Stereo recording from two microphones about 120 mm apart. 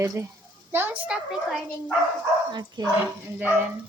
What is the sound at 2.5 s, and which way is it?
Speech, 35° right (ahead or behind).